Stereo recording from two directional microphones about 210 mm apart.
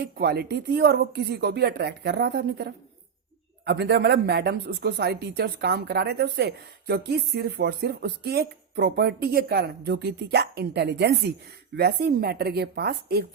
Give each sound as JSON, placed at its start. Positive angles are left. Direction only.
{"t": 0.0, "sound": "speech", "side_deg": -50}